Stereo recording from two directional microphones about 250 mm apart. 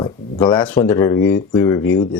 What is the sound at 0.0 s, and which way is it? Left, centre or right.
Speech, centre.